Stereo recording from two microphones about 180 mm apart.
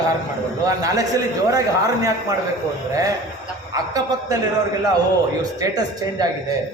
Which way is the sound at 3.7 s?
20° right (ahead or behind).